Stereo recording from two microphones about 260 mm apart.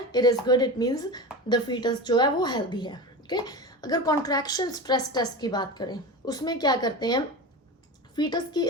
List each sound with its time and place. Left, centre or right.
0.1 s a woman's voice: centre